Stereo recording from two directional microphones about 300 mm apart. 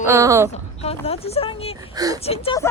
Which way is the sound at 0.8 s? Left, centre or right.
Centre.